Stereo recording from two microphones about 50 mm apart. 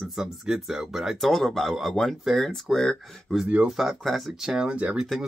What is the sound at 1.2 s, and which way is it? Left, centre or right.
Speech, centre.